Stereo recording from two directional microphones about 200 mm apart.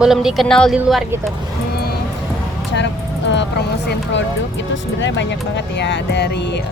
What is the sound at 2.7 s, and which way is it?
Vehicle, 65° left (ahead or behind).